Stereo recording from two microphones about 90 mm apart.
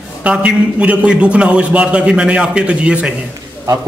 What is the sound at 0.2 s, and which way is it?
A man's voice, 15° right (ahead or behind).